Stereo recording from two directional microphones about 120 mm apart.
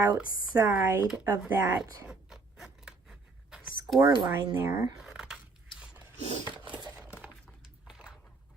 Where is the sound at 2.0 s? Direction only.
5° right (ahead or behind).